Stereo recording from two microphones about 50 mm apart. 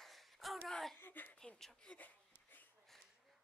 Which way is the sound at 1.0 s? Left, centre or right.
Left.